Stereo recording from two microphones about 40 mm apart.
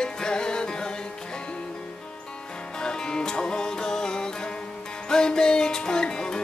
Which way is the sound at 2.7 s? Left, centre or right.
Centre.